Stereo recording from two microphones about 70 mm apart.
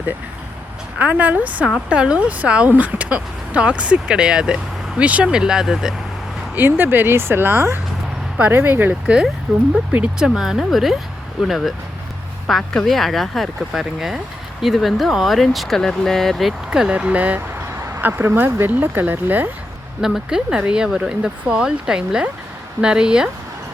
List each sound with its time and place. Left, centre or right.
0.9 s speech: right; by 5.9 s centre
6.6 s speech: right
9.5 s speech: centre
16.6 s speech: centre
20.0 s speech: centre